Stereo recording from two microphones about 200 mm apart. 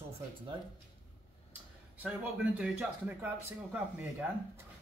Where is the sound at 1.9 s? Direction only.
5° right (ahead or behind).